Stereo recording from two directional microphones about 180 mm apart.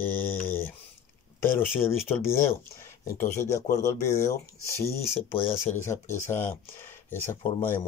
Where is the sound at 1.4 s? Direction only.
15° left (ahead or behind).